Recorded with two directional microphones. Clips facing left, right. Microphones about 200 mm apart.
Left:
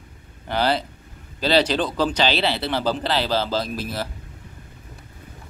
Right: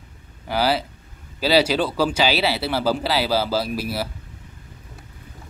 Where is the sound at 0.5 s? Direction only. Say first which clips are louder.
Right 1 dB; 5° right (ahead or behind).